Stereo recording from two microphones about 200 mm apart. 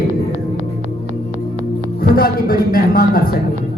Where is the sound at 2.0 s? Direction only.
45° left (ahead or behind).